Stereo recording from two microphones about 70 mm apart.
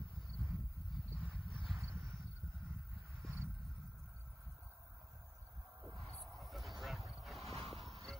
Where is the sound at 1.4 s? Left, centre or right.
Centre.